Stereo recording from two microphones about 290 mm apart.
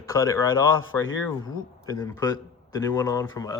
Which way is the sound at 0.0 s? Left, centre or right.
Centre.